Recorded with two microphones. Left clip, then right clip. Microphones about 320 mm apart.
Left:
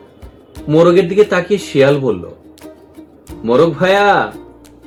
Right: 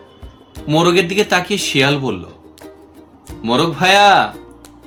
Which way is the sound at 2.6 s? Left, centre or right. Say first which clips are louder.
Left 2 dB; centre.